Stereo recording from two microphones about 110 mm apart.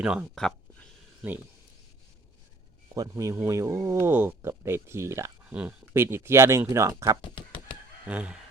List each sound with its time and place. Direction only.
0.0 s speech: 10° right (ahead or behind)
0.3 s a sound: 5° left (ahead or behind)
2.9 s speech: 30° right (ahead or behind)
5.5 s speech: 15° right (ahead or behind)
8.0 s speech: 10° right (ahead or behind)